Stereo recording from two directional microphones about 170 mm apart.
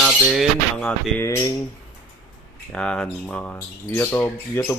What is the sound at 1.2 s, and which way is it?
Speech, 15° left (ahead or behind).